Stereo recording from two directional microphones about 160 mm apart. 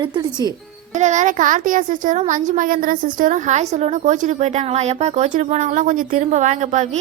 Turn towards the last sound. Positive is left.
turn(degrees=-50)  # may be behind; listen again after turning